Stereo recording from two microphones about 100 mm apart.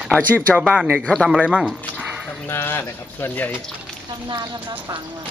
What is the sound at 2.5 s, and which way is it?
Speech, 25° left (ahead or behind).